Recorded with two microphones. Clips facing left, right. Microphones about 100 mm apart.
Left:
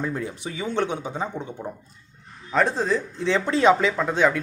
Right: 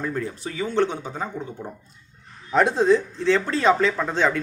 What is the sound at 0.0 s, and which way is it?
Speech, 15° left (ahead or behind).